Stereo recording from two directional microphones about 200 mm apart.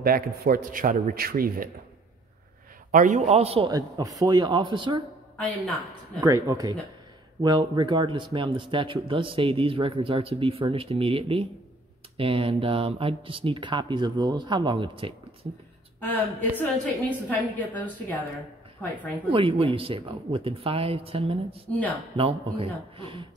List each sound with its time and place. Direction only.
0.0 s a man's voice: 45° right (ahead or behind)
2.9 s speech: 40° right (ahead or behind); by 5.0 s 25° right (ahead or behind)
6.1 s speech: 15° right (ahead or behind)
16.0 s a woman's voice: 10° left (ahead or behind)
19.2 s speech: 25° right (ahead or behind)